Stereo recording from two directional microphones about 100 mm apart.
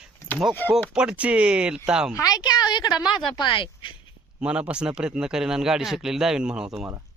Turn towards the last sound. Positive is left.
turn(degrees=-5)  # may be behind; listen again after turning